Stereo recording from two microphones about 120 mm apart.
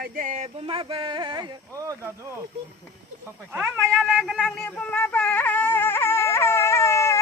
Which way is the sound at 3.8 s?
5° left (ahead or behind).